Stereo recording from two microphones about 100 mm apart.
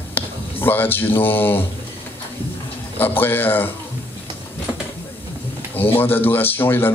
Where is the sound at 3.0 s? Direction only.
20° left (ahead or behind).